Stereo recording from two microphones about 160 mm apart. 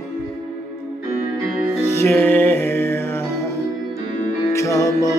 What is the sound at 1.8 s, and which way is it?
Music, 15° left (ahead or behind).